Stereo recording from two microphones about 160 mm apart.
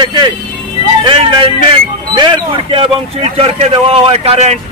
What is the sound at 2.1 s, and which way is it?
A man's voice, 30° right (ahead or behind).